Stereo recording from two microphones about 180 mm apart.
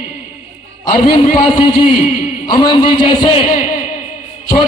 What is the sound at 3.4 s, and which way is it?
Speech, 50° left (ahead or behind).